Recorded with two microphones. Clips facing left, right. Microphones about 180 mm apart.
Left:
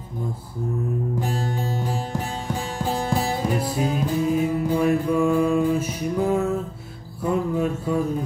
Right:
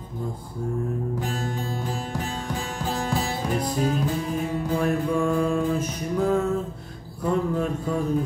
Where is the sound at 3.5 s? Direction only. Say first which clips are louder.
Left 1 dB; 5° left (ahead or behind).